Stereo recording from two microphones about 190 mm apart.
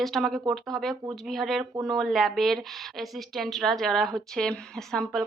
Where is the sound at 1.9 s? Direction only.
Centre (ahead or behind).